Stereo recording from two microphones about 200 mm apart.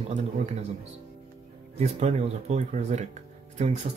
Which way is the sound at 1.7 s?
35° right (ahead or behind).